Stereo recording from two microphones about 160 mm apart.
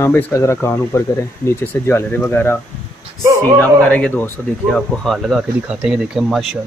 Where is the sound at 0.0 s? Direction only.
15° left (ahead or behind).